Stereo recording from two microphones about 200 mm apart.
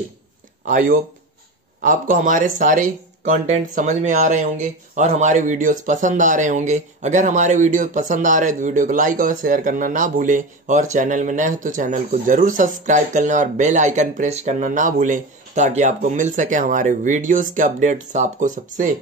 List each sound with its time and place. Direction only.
0.7 s speech: 45° right (ahead or behind)